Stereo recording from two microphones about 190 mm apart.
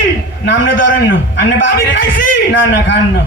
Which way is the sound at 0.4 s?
70° left (ahead or behind).